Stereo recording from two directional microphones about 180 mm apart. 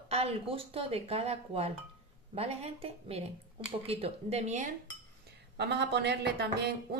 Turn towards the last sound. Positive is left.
turn(degrees=-65)  # may be behind; listen again after turning